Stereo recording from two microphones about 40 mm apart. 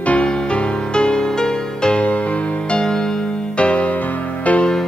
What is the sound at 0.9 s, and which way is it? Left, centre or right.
Music, left.